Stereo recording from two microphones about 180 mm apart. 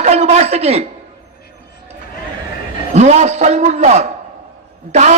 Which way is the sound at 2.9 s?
40° right (ahead or behind).